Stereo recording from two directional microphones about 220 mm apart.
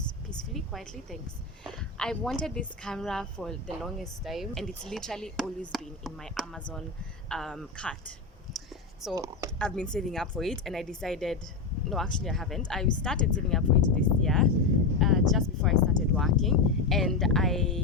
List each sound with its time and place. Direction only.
0.5 s a woman's voice: centre (ahead or behind)
8.5 s a sound: centre (ahead or behind)
9.1 s speech: 15° right (ahead or behind)
9.6 s a woman's voice: 5° left (ahead or behind)
14.9 s a sound: centre (ahead or behind)
16.4 s a woman's voice: centre (ahead or behind)